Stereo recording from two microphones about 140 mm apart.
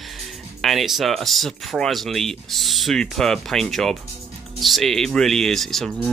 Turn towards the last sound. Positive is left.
turn(degrees=0)  # may be behind; listen again after turning